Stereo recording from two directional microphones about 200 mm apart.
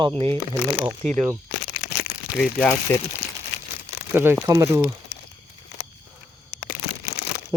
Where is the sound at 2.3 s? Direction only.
Centre (ahead or behind).